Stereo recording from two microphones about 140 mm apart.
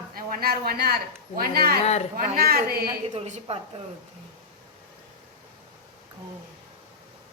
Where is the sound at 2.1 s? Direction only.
90° right.